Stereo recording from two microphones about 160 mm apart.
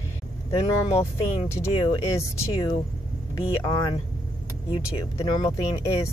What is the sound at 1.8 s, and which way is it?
Speech, 20° left (ahead or behind).